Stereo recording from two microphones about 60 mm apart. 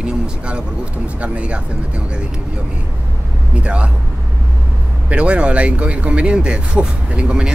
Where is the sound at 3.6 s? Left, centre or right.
Centre.